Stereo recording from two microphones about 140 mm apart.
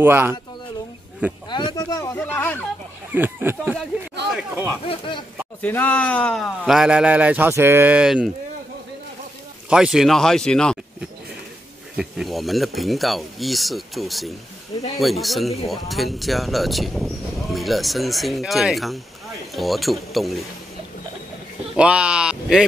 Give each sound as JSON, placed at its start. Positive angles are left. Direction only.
{"t": 0.0, "sound": "speech", "side_deg": -15}
{"t": 1.5, "sound": "speech", "side_deg": 30}
{"t": 2.1, "sound": "speech", "side_deg": 10}
{"t": 3.1, "sound": "speech", "side_deg": -15}
{"t": 4.8, "sound": "speech", "side_deg": 35}
{"t": 5.6, "sound": "speech", "side_deg": 10}
{"t": 9.7, "sound": "speech", "side_deg": -5}
{"t": 12.0, "sound": "speech", "side_deg": 0}
{"t": 21.7, "sound": "speech", "side_deg": -10}